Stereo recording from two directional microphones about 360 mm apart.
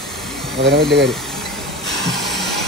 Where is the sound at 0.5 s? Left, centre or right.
Right.